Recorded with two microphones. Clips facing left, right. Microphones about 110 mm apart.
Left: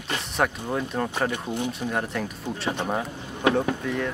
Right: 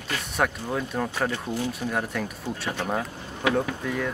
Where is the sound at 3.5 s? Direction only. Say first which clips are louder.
Left 1 dB; centre (ahead or behind).